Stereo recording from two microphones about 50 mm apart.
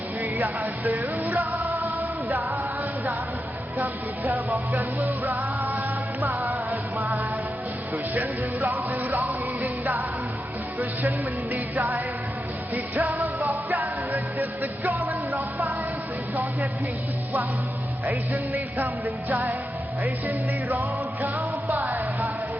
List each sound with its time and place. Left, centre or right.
0.2 s music: right
3.8 s music: right
11.5 s music: right
18.0 s music: right